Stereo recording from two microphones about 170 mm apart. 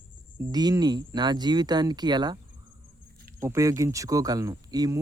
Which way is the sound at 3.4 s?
20° right (ahead or behind).